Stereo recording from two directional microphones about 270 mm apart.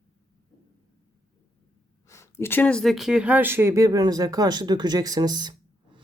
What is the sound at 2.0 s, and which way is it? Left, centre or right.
Speech, centre.